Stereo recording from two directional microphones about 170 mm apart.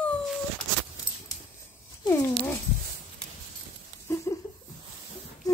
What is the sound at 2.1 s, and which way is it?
Cat, 10° left (ahead or behind).